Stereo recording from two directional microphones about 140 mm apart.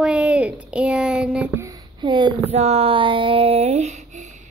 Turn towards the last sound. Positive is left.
turn(degrees=-60)  # may be behind; listen again after turning